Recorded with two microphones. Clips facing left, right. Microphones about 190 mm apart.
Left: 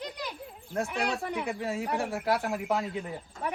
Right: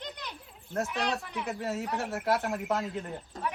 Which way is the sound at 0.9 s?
55° left (ahead or behind).